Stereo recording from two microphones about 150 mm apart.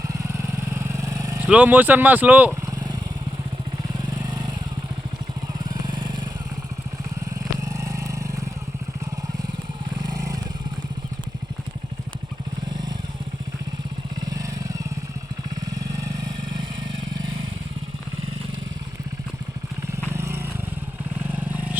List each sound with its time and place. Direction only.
0.1 s vehicle: 20° right (ahead or behind)
1.4 s speech: 10° right (ahead or behind)
2.6 s vehicle: 25° right (ahead or behind)
4.1 s vehicle: 30° right (ahead or behind)
5.6 s vehicle: 30° right (ahead or behind)
7.6 s vehicle: 20° right (ahead or behind)
10.0 s vehicle: 25° right (ahead or behind)
14.3 s vehicle: 20° right (ahead or behind)
20.1 s vehicle: 15° right (ahead or behind)